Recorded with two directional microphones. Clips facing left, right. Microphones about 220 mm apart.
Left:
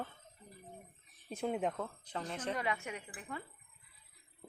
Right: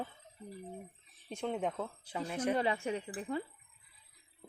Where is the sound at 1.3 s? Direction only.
5° left (ahead or behind).